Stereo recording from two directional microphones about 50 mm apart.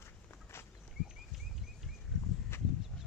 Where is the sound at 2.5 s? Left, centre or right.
Left.